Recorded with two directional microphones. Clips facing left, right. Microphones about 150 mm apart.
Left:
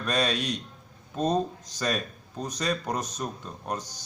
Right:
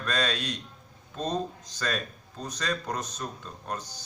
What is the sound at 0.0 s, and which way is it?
Speech, 15° left (ahead or behind).